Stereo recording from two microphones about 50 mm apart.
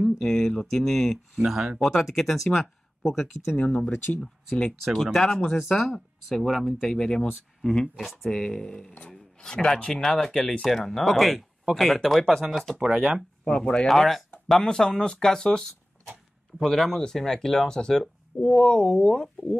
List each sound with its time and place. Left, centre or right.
0.2 s speech: centre
3.6 s speech: centre
3.9 s speech: left
4.2 s speech: centre
12.8 s speech: centre
13.5 s speech: centre
13.8 s speech: centre